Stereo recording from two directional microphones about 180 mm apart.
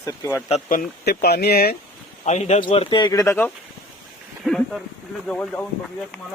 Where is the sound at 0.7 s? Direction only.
55° left (ahead or behind).